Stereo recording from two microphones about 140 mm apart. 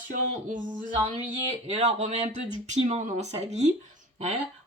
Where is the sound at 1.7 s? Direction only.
55° right (ahead or behind).